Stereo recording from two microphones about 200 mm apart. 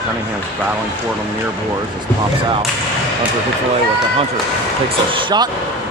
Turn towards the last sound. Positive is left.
turn(degrees=-20)  # may be behind; listen again after turning